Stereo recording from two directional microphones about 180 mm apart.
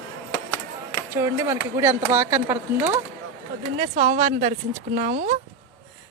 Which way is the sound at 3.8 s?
45° right (ahead or behind).